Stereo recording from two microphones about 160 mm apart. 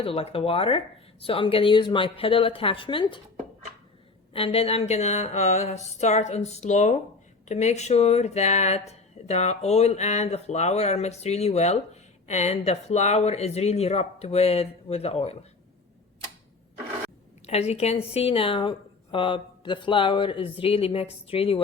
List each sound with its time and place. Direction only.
0.0 s a woman's voice: 40° left (ahead or behind)
4.4 s a woman's voice: 35° left (ahead or behind)
17.4 s a woman's voice: 40° left (ahead or behind)